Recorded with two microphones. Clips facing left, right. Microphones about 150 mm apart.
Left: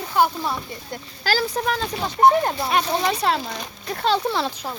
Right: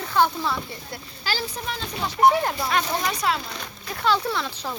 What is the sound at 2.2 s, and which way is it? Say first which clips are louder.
Speech: left 2 dB; 25° left (ahead or behind).